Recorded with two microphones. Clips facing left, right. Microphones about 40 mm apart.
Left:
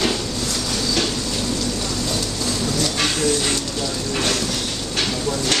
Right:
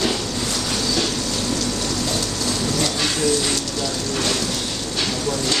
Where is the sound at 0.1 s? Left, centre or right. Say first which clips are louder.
Even; centre.